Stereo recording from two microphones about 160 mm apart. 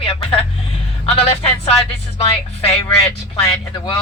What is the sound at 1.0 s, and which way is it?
Speech, 35° left (ahead or behind).